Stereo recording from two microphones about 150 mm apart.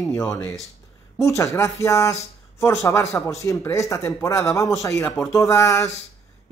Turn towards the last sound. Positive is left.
turn(degrees=20)  # may be behind; listen again after turning